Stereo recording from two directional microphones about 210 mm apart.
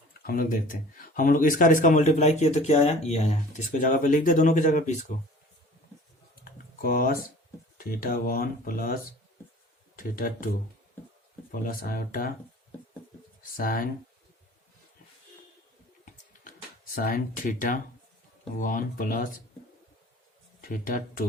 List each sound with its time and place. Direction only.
0.2 s speech: 45° left (ahead or behind)
6.4 s typing: 45° left (ahead or behind)
7.8 s speech: 45° left (ahead or behind)
11.5 s speech: 40° left (ahead or behind)
13.6 s speech: 45° left (ahead or behind)
16.9 s speech: 40° left (ahead or behind)
20.6 s speech: 45° left (ahead or behind)